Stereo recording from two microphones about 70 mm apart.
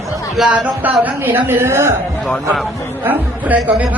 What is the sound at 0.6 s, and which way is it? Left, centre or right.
Speech, right.